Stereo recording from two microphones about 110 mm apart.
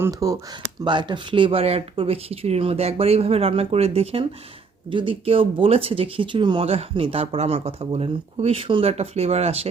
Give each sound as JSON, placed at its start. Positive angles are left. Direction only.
{"t": 0.0, "sound": "speech", "side_deg": -30}
{"t": 0.9, "sound": "speech", "side_deg": -45}
{"t": 4.9, "sound": "speech", "side_deg": -50}
{"t": 6.7, "sound": "speech", "side_deg": -65}